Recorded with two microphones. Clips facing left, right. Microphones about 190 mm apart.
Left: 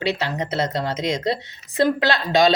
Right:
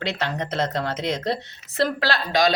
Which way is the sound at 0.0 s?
10° left (ahead or behind).